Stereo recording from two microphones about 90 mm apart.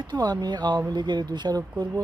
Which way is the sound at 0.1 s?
50° right (ahead or behind).